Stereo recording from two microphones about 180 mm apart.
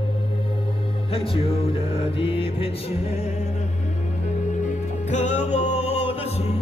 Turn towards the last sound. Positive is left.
turn(degrees=35)  # may be behind; listen again after turning